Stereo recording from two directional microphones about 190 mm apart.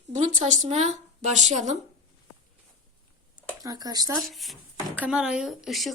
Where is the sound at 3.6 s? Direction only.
20° right (ahead or behind).